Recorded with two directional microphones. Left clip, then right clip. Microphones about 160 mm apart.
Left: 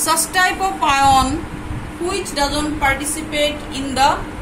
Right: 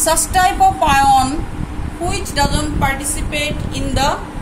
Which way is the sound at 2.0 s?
60° right (ahead or behind).